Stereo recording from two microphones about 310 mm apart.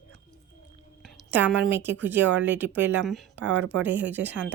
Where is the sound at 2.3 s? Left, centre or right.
Right.